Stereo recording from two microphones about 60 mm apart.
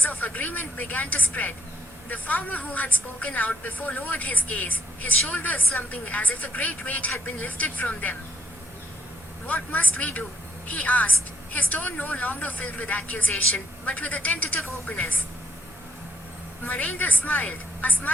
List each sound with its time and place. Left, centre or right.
0.0 s a woman's voice: left
9.5 s a woman's voice: left
16.6 s a woman's voice: left